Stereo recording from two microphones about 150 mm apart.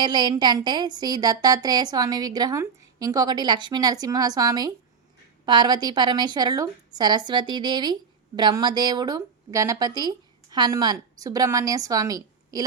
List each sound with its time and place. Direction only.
0.0 s a woman's voice: 30° right (ahead or behind)